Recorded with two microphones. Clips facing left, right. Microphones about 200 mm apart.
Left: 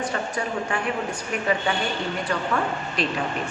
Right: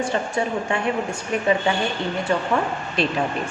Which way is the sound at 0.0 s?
25° right (ahead or behind).